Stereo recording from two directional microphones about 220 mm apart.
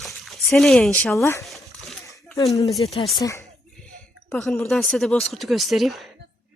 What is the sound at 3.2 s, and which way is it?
Speech, 15° left (ahead or behind).